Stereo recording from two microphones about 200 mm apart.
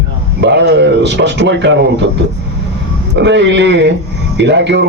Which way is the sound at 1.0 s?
60° right (ahead or behind).